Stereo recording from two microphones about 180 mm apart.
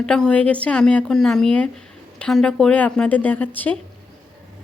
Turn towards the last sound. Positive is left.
turn(degrees=10)  # may be behind; listen again after turning